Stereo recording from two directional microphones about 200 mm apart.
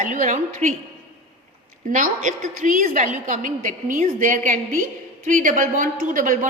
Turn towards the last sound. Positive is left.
turn(degrees=-40)  # may be behind; listen again after turning